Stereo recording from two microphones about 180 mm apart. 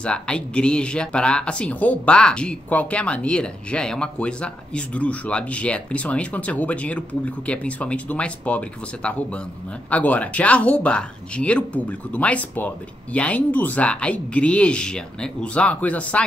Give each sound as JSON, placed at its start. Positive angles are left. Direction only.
{"t": 0.0, "sound": "speech", "side_deg": 5}